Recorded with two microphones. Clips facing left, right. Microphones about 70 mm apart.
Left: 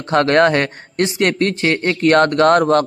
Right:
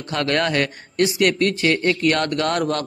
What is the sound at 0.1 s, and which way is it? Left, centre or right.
A man's voice, left.